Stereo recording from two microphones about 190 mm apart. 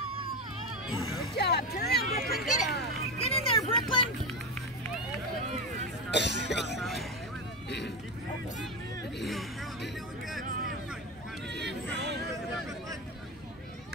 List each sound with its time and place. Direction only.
1.3 s speech: 60° left (ahead or behind)
2.1 s speech: 45° left (ahead or behind)
3.2 s vehicle: 30° left (ahead or behind)
6.1 s speech: 65° left (ahead or behind)
6.8 s speech: centre (ahead or behind)
11.6 s a sound: 65° right (ahead or behind)